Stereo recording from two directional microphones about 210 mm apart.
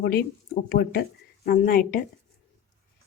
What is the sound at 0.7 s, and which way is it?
Speech, 50° left (ahead or behind).